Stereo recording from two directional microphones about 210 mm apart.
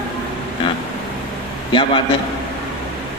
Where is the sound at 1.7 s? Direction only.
20° left (ahead or behind).